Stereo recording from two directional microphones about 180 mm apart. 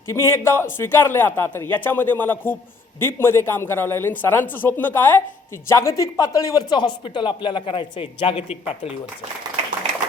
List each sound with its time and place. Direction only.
0.1 s a man's voice: 15° left (ahead or behind); by 8.9 s 35° left (ahead or behind)